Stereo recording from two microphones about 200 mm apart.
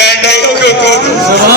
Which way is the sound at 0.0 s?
55° left (ahead or behind).